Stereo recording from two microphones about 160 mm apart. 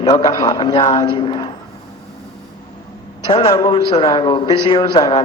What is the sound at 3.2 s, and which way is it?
A man's voice, 30° left (ahead or behind).